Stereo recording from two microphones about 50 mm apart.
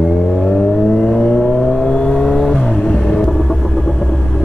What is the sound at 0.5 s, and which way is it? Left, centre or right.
Vehicle, centre.